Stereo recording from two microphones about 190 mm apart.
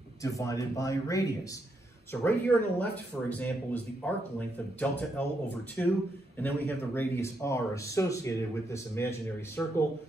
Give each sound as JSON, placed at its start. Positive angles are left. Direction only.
{"t": 0.2, "sound": "speech", "side_deg": 15}
{"t": 2.2, "sound": "speech", "side_deg": 10}